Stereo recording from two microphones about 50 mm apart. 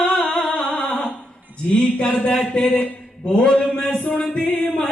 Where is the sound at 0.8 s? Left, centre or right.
Centre.